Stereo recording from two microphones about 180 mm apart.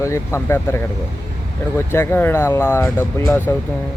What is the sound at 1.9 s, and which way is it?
Speech, 15° left (ahead or behind).